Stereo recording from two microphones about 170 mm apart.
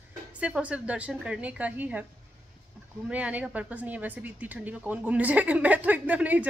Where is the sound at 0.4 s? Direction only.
5° right (ahead or behind).